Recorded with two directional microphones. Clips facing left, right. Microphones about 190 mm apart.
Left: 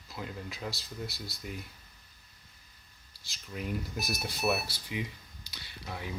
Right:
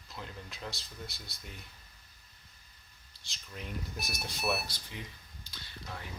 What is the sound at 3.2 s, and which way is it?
Speech, 5° left (ahead or behind).